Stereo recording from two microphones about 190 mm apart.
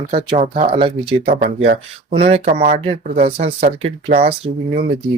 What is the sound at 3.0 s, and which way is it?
Speech, 45° right (ahead or behind).